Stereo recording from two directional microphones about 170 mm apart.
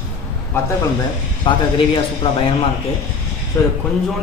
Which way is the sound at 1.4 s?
30° left (ahead or behind).